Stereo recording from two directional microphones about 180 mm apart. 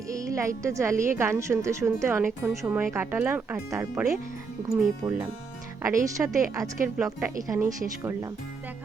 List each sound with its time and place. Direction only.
0.1 s speech: 20° right (ahead or behind)